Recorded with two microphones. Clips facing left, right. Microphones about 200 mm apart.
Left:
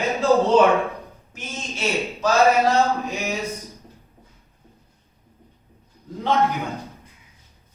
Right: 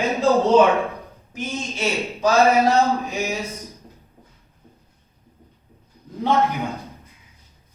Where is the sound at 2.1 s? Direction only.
15° right (ahead or behind).